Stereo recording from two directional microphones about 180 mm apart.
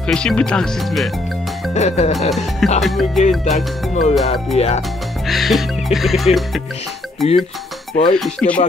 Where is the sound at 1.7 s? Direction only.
40° left (ahead or behind).